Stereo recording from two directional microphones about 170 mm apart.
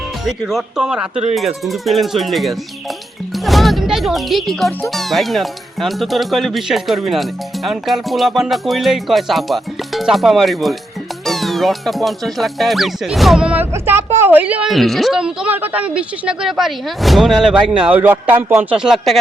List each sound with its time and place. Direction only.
0.3 s speech: centre (ahead or behind)
1.1 s speech: 40° right (ahead or behind)
1.4 s speech: centre (ahead or behind)